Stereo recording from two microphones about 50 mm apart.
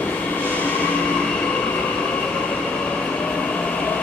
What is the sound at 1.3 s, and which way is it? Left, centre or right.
Train, left.